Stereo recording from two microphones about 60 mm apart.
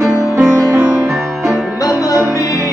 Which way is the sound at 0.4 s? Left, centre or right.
Right.